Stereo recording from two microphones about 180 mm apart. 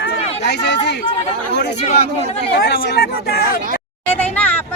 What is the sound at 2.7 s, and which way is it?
Speech, 65° left (ahead or behind).